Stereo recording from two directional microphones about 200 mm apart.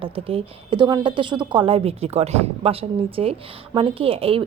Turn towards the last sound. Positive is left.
turn(degrees=-30)  # may be behind; listen again after turning